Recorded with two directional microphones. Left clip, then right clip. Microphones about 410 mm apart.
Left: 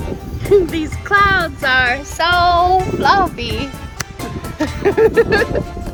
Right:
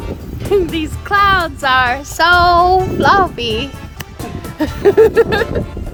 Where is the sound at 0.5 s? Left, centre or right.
Centre.